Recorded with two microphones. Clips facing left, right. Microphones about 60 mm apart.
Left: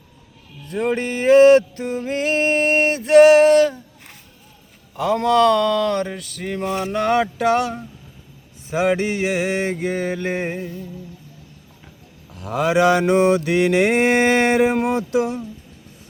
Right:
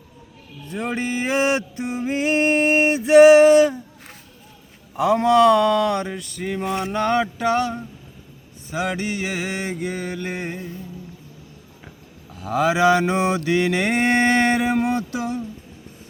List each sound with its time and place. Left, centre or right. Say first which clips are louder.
0.7 s music: left 4 dB; centre
4.9 s music: right 1 dB; centre
6.9 s mantra: left 2 dB; centre
8.7 s music: left 6 dB; left
9.2 s music: left 6 dB; centre
12.4 s mantra: left 1 dB; centre